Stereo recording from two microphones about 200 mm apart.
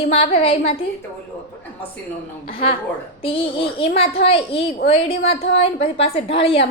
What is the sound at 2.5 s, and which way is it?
A woman's voice, 25° left (ahead or behind).